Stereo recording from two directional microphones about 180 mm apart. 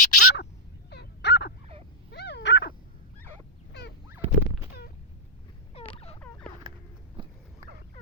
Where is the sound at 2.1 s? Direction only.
70° left (ahead or behind).